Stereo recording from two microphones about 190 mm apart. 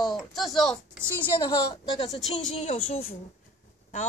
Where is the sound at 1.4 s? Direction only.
25° left (ahead or behind).